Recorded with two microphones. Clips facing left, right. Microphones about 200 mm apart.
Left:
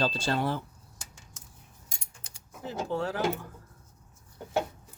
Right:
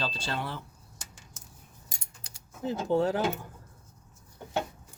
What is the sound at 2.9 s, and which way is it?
Speech, 20° right (ahead or behind).